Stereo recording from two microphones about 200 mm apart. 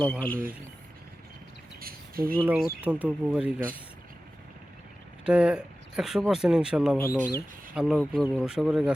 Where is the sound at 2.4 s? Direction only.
10° right (ahead or behind).